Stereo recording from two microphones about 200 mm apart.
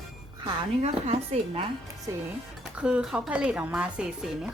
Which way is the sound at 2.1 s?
15° right (ahead or behind).